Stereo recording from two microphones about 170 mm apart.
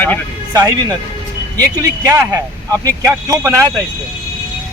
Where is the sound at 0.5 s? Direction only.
20° right (ahead or behind).